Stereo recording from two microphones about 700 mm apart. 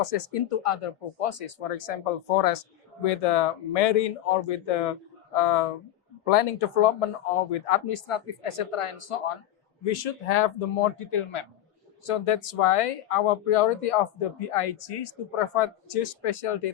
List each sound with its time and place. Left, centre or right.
0.0 s speech: left
9.8 s speech: left
10.9 s speech: left